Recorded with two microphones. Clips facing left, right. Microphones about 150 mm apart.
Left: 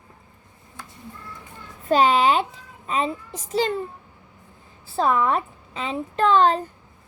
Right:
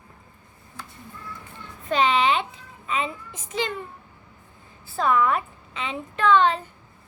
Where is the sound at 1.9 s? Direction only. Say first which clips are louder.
Left 3 dB; 40° left (ahead or behind).